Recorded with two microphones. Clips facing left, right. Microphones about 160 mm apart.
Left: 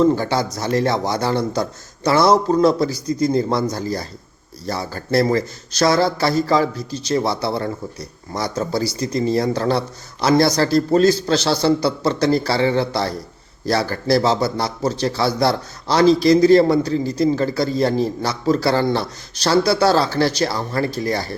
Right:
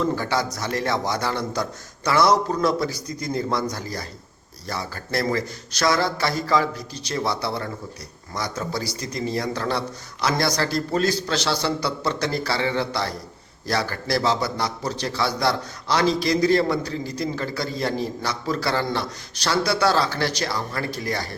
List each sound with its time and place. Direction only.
0.0 s a man's voice: 30° left (ahead or behind)
9.0 s a man's voice: 30° left (ahead or behind)